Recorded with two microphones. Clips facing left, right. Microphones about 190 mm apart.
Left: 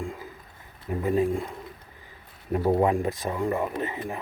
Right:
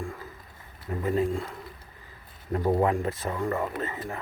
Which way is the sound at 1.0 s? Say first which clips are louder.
Left 2 dB; 15° left (ahead or behind).